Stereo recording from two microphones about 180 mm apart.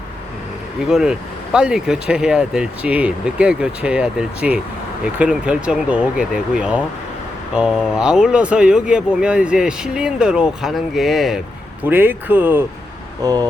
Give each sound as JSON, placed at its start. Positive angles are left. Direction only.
{"t": 0.9, "sound": "speech", "side_deg": 0}
{"t": 13.2, "sound": "speech", "side_deg": -20}